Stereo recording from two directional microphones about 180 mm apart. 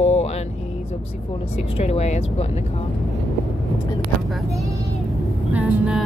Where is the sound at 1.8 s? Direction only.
35° left (ahead or behind).